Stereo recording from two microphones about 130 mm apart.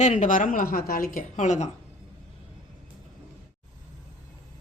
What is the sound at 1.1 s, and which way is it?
Speech, 65° left (ahead or behind).